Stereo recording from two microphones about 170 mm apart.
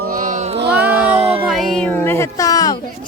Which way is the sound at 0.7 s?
10° right (ahead or behind).